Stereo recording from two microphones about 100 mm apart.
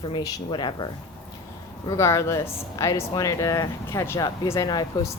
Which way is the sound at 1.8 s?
30° left (ahead or behind).